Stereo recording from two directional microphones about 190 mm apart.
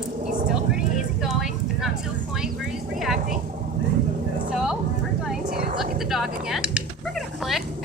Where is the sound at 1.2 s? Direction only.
Centre (ahead or behind).